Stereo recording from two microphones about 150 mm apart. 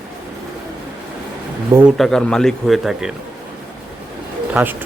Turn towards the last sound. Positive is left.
turn(degrees=-10)  # may be behind; listen again after turning